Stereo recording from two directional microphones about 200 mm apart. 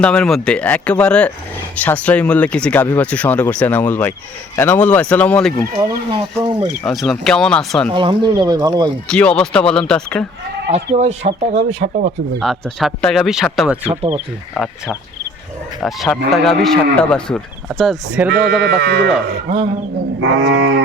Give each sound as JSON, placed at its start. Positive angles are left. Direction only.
{"t": 0.0, "sound": "speech", "side_deg": 5}
{"t": 5.7, "sound": "speech", "side_deg": -20}
{"t": 6.8, "sound": "speech", "side_deg": 0}
{"t": 7.9, "sound": "speech", "side_deg": -25}
{"t": 9.0, "sound": "speech", "side_deg": 5}
{"t": 10.7, "sound": "speech", "side_deg": -35}
{"t": 12.4, "sound": "speech", "side_deg": 0}
{"t": 18.6, "sound": "speech", "side_deg": -55}
{"t": 20.2, "sound": "livestock", "side_deg": -70}